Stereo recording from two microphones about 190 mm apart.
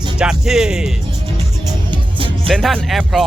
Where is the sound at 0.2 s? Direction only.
5° right (ahead or behind).